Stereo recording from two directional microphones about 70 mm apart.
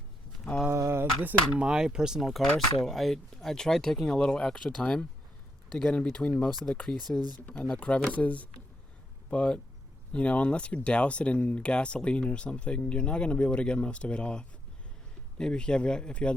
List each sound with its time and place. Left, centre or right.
0.7 s a sound: right
1.2 s speech: right
1.6 s speech: centre
7.2 s speech: right
7.4 s speech: centre